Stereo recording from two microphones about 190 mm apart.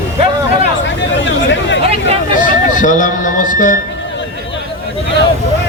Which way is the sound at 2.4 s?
45° left (ahead or behind).